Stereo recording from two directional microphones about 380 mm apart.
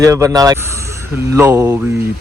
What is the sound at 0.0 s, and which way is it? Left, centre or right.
Speech, centre.